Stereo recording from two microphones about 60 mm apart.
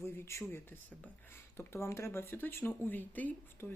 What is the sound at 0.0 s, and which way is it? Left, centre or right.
Speech, left.